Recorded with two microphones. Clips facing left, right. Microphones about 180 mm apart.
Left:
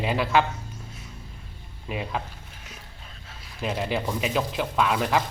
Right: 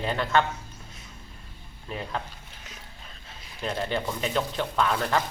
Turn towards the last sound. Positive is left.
turn(degrees=5)  # may be behind; listen again after turning